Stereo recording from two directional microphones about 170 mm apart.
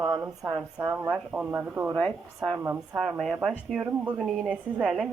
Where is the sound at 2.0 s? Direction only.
5° left (ahead or behind).